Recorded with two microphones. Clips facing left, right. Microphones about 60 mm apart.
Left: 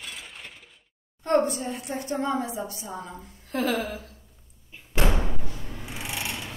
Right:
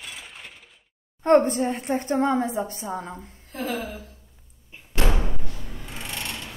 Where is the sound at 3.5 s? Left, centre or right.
Left.